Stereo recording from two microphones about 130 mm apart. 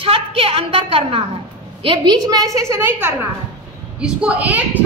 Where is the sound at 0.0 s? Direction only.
45° right (ahead or behind).